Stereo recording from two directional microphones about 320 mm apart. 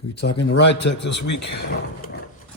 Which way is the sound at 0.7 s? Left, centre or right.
Left.